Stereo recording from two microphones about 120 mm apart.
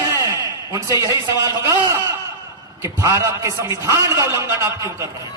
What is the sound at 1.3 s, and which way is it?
A man's voice, 25° right (ahead or behind).